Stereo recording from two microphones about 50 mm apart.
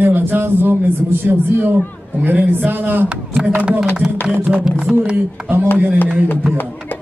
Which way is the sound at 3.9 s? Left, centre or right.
Centre.